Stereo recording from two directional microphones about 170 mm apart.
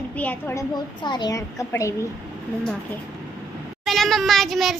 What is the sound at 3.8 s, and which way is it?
Speech, centre (ahead or behind).